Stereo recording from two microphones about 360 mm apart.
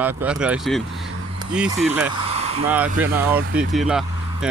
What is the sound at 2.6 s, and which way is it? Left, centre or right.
Speech, centre.